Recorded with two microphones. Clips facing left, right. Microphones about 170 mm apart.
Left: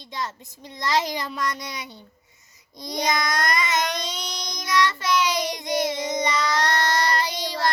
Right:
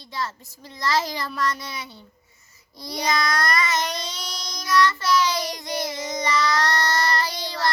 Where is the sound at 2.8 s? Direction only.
20° left (ahead or behind).